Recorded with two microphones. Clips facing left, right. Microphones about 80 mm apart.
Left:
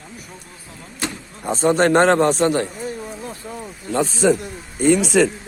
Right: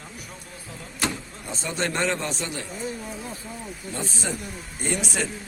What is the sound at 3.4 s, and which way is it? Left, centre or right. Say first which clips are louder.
Speech: left 6 dB; left.